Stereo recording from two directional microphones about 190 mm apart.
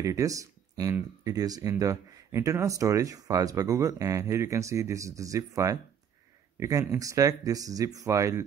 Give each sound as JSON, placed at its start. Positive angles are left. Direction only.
{"t": 0.0, "sound": "speech", "side_deg": -15}